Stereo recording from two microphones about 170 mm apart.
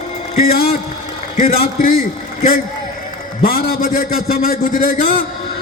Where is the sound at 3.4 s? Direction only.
60° left (ahead or behind).